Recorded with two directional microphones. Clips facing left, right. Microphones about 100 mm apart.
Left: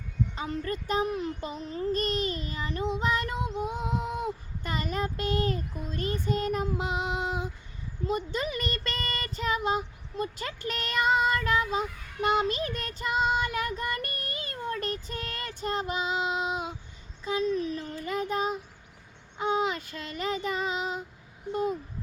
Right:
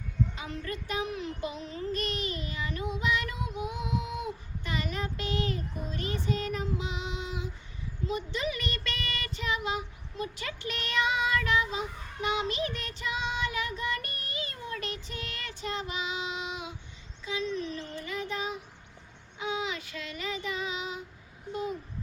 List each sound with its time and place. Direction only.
0.3 s child singing: 40° left (ahead or behind)
17.2 s speech: 45° left (ahead or behind)
17.7 s child singing: 45° left (ahead or behind)